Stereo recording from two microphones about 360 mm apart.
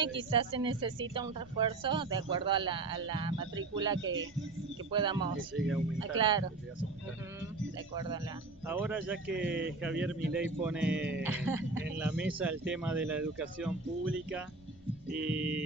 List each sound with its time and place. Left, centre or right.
0.3 s a man's voice: centre
4.0 s speech: right
4.9 s a man's voice: centre
8.6 s speech: centre
15.2 s speech: centre